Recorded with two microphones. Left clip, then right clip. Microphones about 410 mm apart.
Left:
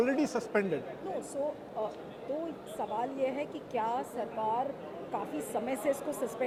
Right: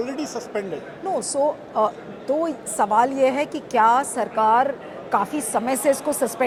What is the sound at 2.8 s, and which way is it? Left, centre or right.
A woman's voice, right.